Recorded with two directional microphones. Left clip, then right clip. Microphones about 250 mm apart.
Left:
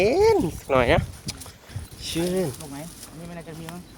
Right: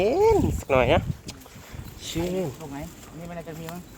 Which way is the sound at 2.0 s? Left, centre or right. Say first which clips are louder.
Left 3 dB; centre.